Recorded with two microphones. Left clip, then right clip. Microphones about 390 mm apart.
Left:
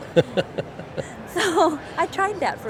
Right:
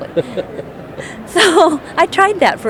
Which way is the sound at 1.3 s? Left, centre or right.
Right.